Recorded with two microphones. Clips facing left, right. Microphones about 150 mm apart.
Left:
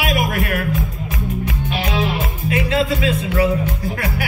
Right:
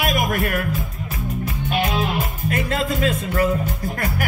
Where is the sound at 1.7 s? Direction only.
45° right (ahead or behind).